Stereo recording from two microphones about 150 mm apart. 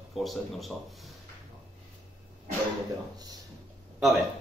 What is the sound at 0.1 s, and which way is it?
Speech, centre (ahead or behind).